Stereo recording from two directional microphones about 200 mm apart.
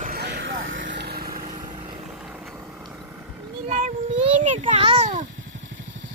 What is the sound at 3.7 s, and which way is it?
Child singing, 40° right (ahead or behind).